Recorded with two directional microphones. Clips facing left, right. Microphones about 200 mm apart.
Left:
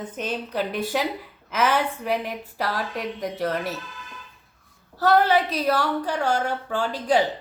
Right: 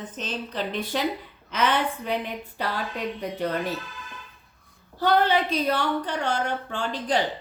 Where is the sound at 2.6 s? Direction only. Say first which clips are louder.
Left 2 dB; 90° left.